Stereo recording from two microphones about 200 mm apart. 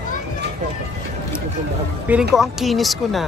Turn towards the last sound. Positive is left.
turn(degrees=0)  # may be behind; listen again after turning